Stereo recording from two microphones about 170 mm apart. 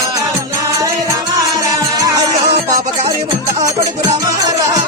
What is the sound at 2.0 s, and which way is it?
Music, 20° right (ahead or behind).